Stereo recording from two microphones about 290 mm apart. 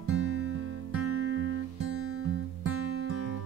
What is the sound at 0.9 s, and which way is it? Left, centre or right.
Guitar, right.